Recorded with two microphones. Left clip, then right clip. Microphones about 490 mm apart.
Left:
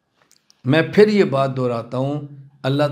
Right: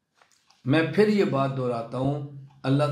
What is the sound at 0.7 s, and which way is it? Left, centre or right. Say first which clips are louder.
A man's voice: left 7 dB; left.